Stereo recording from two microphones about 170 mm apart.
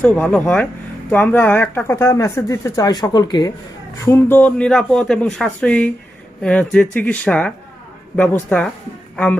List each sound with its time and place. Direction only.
0.0 s speech: 10° left (ahead or behind); by 3.5 s 25° left (ahead or behind)
4.0 s speech: 15° left (ahead or behind)